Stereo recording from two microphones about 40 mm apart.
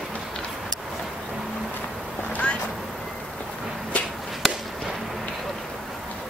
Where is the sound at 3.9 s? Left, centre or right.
Left.